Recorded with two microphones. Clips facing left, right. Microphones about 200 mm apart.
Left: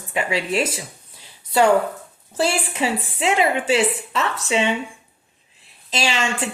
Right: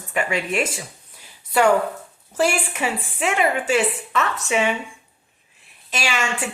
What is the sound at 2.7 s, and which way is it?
Speech, 35° left (ahead or behind).